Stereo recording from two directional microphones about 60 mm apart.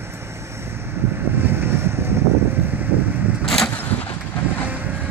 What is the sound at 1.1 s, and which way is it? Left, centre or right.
Vehicle, right.